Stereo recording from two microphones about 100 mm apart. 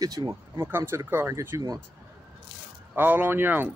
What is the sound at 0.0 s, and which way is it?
Speech, 40° right (ahead or behind).